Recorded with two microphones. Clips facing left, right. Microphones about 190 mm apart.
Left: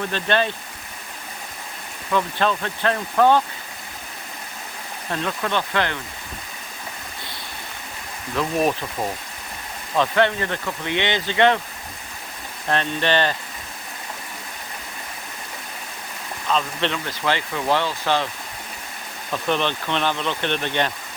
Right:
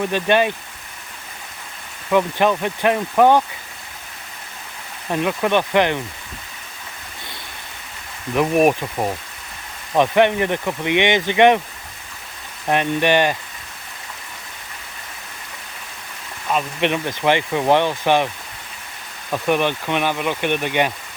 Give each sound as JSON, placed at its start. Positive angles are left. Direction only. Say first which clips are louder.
{"t": 0.0, "sound": "speech", "louder": "right 5 dB", "side_deg": -15}
{"t": 2.1, "sound": "speech", "louder": "right 5 dB", "side_deg": -15}
{"t": 5.1, "sound": "speech", "louder": "right 6 dB", "side_deg": -15}
{"t": 8.4, "sound": "speech", "louder": "right 6 dB", "side_deg": -15}
{"t": 12.6, "sound": "speech", "louder": "right 4 dB", "side_deg": -15}
{"t": 16.5, "sound": "speech", "louder": "right 3 dB", "side_deg": -15}
{"t": 19.3, "sound": "speech", "louder": "right 4 dB", "side_deg": -15}